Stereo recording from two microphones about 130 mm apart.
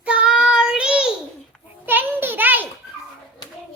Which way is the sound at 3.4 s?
30° left (ahead or behind).